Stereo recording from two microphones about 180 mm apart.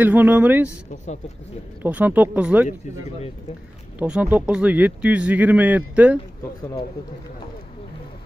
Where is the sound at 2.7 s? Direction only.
35° left (ahead or behind).